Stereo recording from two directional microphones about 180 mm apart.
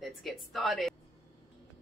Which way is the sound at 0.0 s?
Centre (ahead or behind).